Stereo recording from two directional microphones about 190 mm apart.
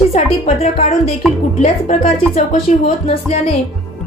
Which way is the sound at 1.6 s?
40° left (ahead or behind).